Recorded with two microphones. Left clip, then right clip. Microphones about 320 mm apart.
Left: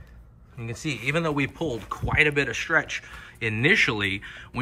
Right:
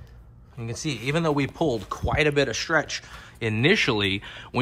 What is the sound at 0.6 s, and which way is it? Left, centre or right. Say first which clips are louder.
Speech: even; centre.